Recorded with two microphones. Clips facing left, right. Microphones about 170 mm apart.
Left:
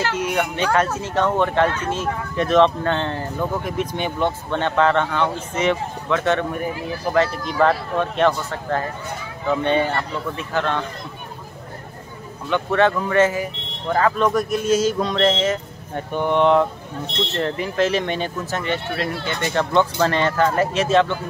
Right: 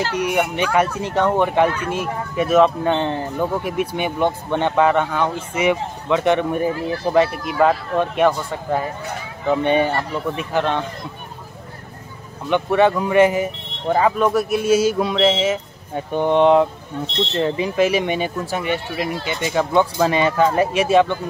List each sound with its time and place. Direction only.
0.2 s speech: 15° right (ahead or behind)
12.4 s speech: 15° right (ahead or behind)